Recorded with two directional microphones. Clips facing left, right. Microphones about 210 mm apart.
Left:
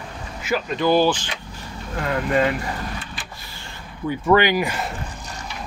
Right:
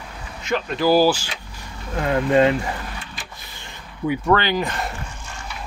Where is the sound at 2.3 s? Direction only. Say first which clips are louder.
Right 4 dB; 20° right (ahead or behind).